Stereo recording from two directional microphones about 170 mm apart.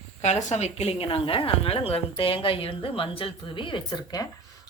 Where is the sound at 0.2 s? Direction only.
45° left (ahead or behind).